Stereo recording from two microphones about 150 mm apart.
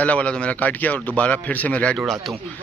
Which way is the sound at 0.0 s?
10° left (ahead or behind).